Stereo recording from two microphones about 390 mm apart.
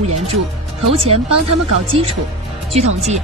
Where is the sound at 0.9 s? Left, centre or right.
Centre.